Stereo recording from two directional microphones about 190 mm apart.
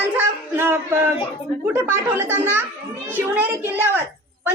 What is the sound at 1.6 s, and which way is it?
A child's voice, 10° right (ahead or behind).